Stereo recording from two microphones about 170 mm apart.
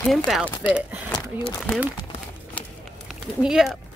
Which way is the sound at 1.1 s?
25° left (ahead or behind).